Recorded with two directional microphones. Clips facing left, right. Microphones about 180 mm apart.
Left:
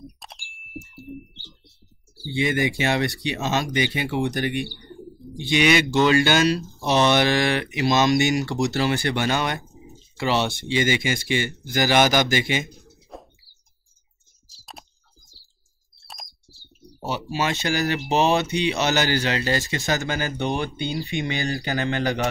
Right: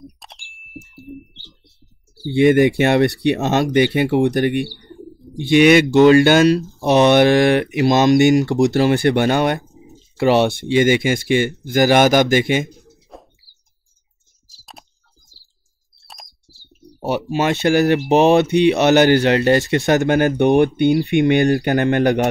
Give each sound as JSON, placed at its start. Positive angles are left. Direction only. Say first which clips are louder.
{"t": 0.2, "sound": "ding", "louder": "even", "side_deg": 0}
{"t": 2.3, "sound": "speech", "louder": "right 11 dB", "side_deg": -55}
{"t": 13.1, "sound": "bird", "louder": "even", "side_deg": 0}
{"t": 14.6, "sound": "computer keyboard", "louder": "even", "side_deg": 0}
{"t": 17.0, "sound": "speech", "louder": "right 7 dB", "side_deg": -55}